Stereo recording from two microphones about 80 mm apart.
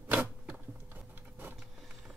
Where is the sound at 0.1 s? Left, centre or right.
Right.